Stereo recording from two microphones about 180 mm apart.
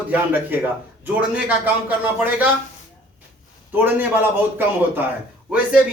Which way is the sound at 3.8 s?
10° right (ahead or behind).